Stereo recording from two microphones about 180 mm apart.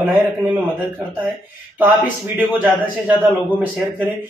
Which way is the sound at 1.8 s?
10° right (ahead or behind).